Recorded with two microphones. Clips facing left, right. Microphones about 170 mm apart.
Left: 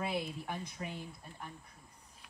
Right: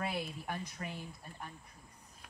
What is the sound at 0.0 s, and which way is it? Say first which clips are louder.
Speech: left 1 dB; 10° left (ahead or behind).